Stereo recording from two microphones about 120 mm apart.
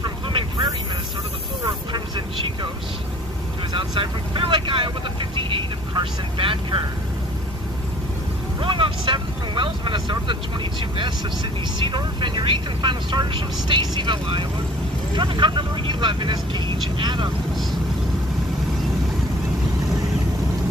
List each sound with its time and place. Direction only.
0.0 s vehicle: 45° right (ahead or behind)
1.9 s vehicle: 40° right (ahead or behind)
3.7 s vehicle: 40° right (ahead or behind)
8.5 s vehicle: 45° right (ahead or behind)
11.8 s speech: 40° right (ahead or behind)